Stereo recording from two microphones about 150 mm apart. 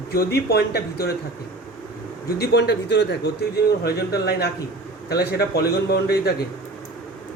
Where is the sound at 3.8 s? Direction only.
90° left.